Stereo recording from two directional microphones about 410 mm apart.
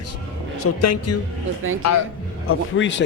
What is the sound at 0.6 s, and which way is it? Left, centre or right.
Speech, left.